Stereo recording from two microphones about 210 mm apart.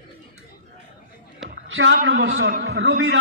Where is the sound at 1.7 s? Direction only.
65° right (ahead or behind).